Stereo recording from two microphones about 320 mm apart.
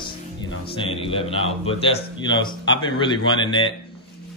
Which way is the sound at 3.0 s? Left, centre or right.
Centre.